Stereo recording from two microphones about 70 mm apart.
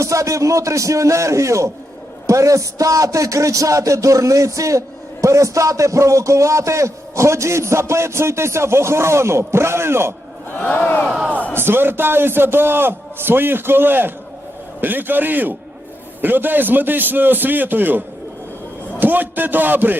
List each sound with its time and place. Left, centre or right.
0.0 s a man's voice: right
10.6 s speech: left
11.5 s a man's voice: right